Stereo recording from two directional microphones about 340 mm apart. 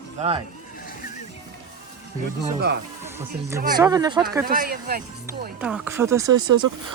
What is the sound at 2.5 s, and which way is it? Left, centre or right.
Speech, right.